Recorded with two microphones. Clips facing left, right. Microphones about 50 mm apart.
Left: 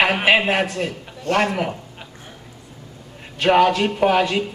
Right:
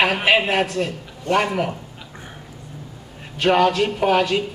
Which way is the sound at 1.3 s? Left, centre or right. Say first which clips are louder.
Even; centre.